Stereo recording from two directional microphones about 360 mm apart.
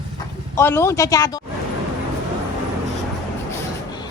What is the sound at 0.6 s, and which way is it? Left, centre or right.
Speech, centre.